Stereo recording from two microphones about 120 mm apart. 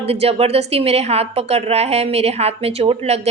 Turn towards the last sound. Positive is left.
turn(degrees=-60)  # may be behind; listen again after turning